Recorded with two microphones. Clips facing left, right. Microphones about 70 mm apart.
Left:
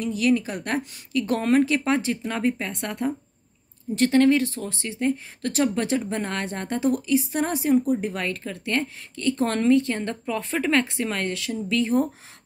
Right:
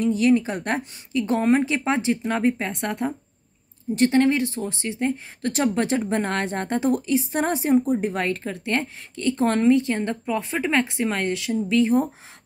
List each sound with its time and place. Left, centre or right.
0.0 s speech: right